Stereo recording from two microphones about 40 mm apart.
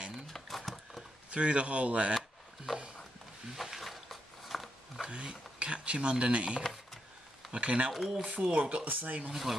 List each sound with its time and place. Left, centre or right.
0.3 s a sound: centre
1.3 s speech: right
2.1 s a sound: centre
5.0 s speech: right
6.6 s a sound: centre
7.5 s speech: right
7.9 s speech: centre
8.2 s speech: right
9.3 s speech: centre